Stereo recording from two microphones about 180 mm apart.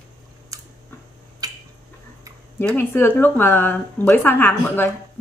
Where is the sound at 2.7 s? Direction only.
10° left (ahead or behind).